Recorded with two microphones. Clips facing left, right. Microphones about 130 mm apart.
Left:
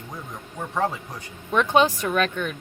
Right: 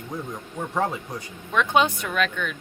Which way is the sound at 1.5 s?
35° left (ahead or behind).